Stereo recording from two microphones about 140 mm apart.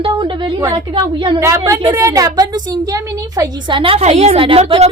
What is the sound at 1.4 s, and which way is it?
A woman's voice, 20° right (ahead or behind).